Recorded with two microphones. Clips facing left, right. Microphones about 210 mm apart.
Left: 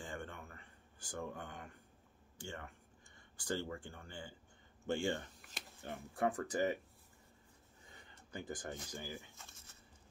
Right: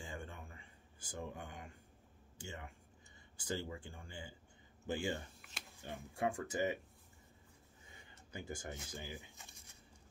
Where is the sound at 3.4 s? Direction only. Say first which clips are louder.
Left 2 dB; 10° right (ahead or behind).